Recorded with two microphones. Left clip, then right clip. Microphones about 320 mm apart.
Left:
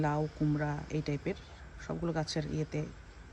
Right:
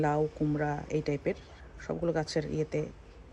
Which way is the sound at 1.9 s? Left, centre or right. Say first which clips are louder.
Right 5 dB; right.